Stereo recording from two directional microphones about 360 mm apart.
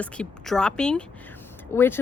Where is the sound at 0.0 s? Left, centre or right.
Centre.